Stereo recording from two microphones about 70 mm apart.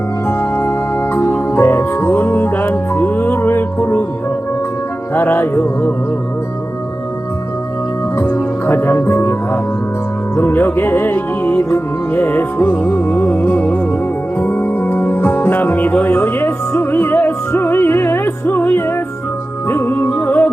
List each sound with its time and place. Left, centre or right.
0.3 s music: left
5.1 s music: left
8.2 s music: left